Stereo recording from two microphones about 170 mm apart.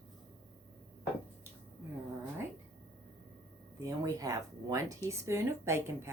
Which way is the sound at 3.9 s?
20° right (ahead or behind).